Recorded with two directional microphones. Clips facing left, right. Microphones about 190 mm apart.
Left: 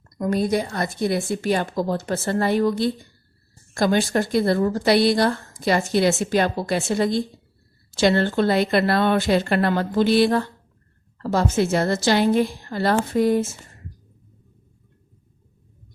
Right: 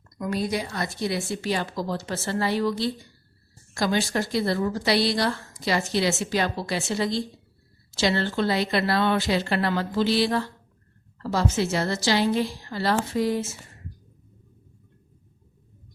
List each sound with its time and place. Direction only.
0.2 s speech: 50° left (ahead or behind)